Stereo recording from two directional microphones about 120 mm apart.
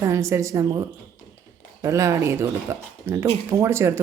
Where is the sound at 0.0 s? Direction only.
25° right (ahead or behind).